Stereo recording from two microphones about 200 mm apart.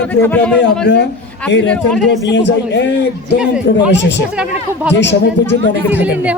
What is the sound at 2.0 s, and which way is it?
Speech, 60° left (ahead or behind).